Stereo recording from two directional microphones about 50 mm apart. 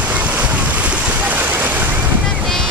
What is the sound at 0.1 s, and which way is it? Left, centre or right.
Boat, right.